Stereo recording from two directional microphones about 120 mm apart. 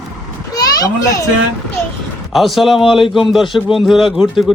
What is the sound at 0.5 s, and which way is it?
Children playing, 30° left (ahead or behind).